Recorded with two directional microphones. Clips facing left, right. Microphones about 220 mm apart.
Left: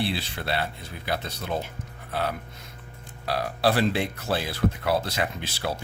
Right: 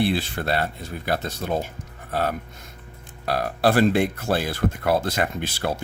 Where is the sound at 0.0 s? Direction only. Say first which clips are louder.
Right 6 dB; 50° right (ahead or behind).